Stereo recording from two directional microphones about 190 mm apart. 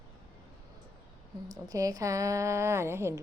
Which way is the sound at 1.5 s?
20° right (ahead or behind).